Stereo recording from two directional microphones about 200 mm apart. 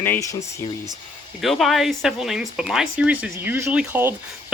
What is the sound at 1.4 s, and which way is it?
Speech, centre (ahead or behind).